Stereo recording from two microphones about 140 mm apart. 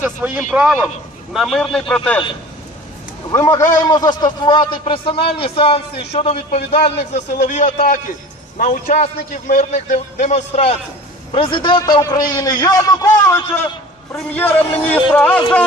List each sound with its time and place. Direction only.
0.0 s a man's voice: 15° right (ahead or behind); by 2.2 s 10° left (ahead or behind)
3.3 s a man's voice: 20° left (ahead or behind)